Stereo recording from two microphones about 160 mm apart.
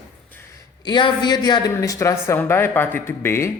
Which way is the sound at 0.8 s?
30° left (ahead or behind).